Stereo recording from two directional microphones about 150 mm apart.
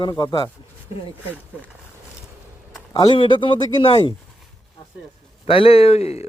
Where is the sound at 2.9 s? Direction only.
30° left (ahead or behind).